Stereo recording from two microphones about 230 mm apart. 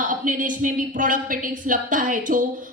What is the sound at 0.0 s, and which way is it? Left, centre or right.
A woman's voice, right.